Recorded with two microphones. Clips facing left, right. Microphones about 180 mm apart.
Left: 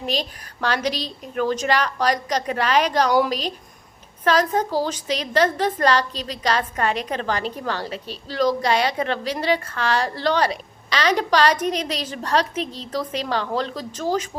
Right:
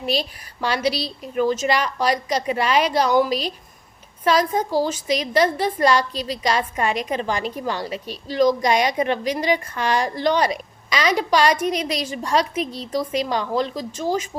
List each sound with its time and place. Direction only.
0.0 s a woman's voice: 10° right (ahead or behind)
3.2 s speech: 40° left (ahead or behind)
4.2 s a woman's voice: 10° right (ahead or behind)